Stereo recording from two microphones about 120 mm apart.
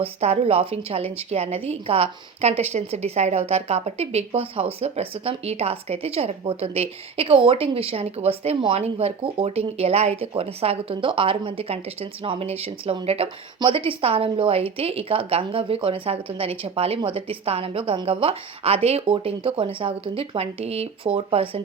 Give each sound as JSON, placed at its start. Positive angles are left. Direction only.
{"t": 0.0, "sound": "a woman's voice", "side_deg": -60}